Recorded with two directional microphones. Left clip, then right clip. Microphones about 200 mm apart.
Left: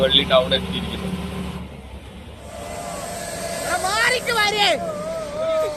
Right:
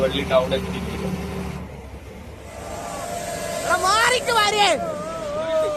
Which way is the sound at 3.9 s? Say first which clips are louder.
Right 1 dB; 25° right (ahead or behind).